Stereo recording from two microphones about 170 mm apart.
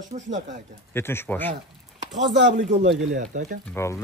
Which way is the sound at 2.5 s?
50° right (ahead or behind).